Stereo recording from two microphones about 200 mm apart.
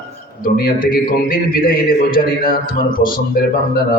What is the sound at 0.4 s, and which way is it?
A man's voice, 45° left (ahead or behind).